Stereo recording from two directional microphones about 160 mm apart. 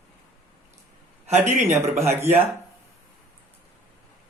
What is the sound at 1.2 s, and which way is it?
Speech, 45° right (ahead or behind).